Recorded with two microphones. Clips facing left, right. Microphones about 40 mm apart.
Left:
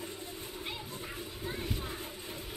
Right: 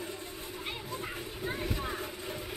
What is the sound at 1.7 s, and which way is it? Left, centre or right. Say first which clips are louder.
Vehicle: right 4 dB; right.